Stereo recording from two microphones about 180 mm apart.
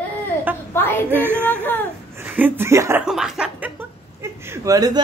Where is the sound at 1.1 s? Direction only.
10° right (ahead or behind).